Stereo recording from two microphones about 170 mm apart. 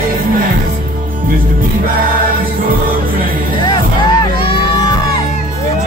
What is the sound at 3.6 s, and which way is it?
Music, 25° left (ahead or behind).